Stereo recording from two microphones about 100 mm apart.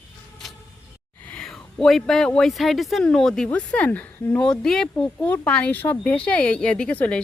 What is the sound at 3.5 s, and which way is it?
Speech, 15° left (ahead or behind).